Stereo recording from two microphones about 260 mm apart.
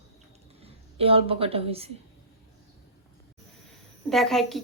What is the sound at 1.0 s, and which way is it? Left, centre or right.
Speech, right.